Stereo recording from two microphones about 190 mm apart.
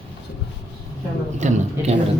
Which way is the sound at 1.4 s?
40° right (ahead or behind).